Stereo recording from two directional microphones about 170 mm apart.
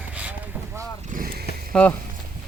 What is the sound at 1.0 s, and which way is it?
Speech, 50° right (ahead or behind).